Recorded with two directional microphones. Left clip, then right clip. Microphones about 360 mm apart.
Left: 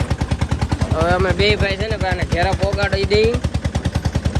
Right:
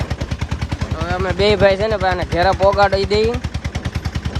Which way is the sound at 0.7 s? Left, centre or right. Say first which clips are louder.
Left 6 dB; centre.